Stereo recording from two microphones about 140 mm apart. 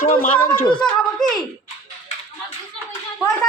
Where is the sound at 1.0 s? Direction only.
Centre (ahead or behind).